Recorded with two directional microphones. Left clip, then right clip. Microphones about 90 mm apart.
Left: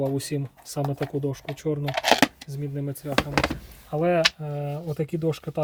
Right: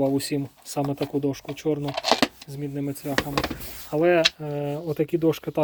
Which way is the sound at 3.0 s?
40° right (ahead or behind).